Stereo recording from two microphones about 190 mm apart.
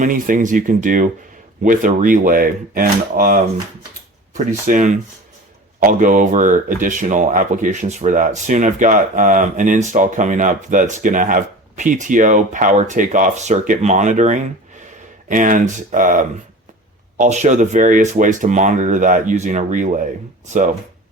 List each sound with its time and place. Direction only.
0.0 s speech: 45° right (ahead or behind)
4.6 s speech: 40° right (ahead or behind)